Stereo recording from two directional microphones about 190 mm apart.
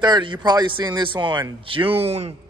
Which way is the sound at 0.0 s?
25° right (ahead or behind).